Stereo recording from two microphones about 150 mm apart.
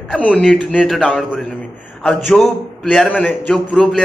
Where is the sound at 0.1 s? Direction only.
10° left (ahead or behind).